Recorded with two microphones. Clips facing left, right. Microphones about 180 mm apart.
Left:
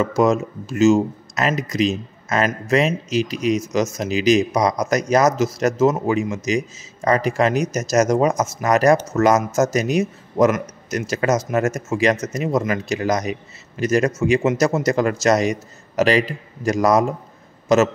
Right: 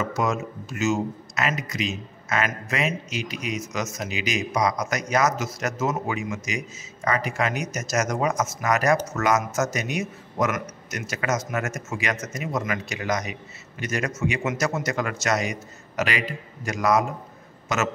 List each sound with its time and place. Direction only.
0.2 s a man's voice: 35° left (ahead or behind)